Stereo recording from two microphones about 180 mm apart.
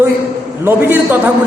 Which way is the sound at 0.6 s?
10° right (ahead or behind).